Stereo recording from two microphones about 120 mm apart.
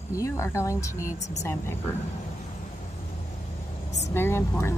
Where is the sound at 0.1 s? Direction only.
25° left (ahead or behind).